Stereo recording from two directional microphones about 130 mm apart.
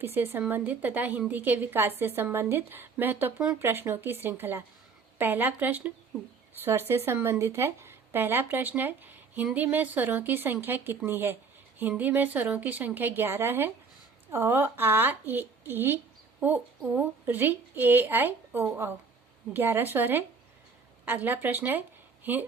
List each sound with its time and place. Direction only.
0.0 s speech: 20° right (ahead or behind)